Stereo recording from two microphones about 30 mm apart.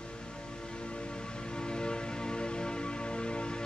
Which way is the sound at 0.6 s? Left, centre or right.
Left.